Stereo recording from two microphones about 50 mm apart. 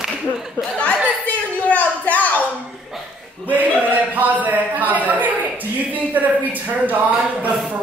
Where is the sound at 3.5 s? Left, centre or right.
Right.